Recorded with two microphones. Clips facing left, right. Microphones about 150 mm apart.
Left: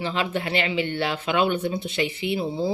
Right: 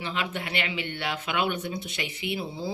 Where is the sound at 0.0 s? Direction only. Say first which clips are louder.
Left 6 dB; 30° left (ahead or behind).